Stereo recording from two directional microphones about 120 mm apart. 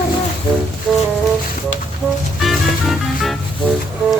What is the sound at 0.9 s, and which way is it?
Speech, 5° left (ahead or behind).